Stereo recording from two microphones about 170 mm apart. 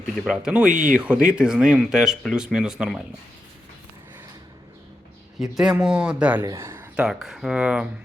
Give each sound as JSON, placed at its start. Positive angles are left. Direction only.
{"t": 0.3, "sound": "speech", "side_deg": -5}
{"t": 0.7, "sound": "speech", "side_deg": -50}
{"t": 0.9, "sound": "speech", "side_deg": -5}
{"t": 5.4, "sound": "speech", "side_deg": -5}